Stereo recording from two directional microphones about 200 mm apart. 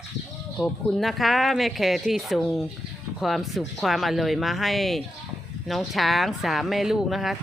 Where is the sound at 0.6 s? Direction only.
Centre (ahead or behind).